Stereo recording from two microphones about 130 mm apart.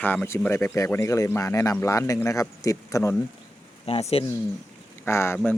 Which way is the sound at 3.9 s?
50° left (ahead or behind).